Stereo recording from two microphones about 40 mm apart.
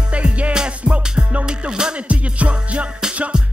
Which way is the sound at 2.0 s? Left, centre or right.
Right.